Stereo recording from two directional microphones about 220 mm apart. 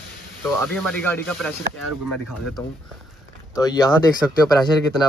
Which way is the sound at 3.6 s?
15° left (ahead or behind).